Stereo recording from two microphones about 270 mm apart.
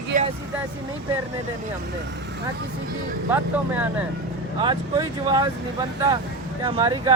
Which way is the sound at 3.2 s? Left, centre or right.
Centre.